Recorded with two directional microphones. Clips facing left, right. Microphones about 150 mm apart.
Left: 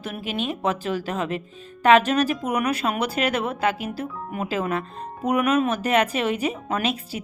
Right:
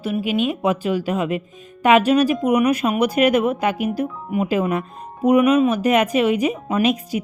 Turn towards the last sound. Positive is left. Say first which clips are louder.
# right 7 dB
turn(degrees=-15)  # may be behind; listen again after turning